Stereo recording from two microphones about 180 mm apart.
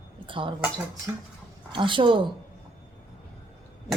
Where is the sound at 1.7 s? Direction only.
25° right (ahead or behind).